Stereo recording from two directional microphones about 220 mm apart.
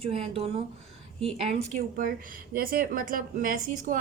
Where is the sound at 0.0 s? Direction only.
25° right (ahead or behind).